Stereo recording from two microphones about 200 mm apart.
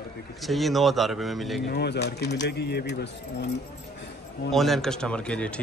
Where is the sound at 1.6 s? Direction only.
55° left (ahead or behind).